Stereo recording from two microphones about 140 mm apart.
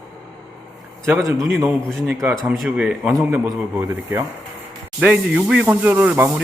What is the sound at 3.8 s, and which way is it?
Speech, 25° right (ahead or behind).